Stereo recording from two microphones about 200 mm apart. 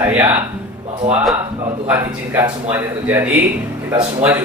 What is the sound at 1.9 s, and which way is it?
Speech, 10° right (ahead or behind).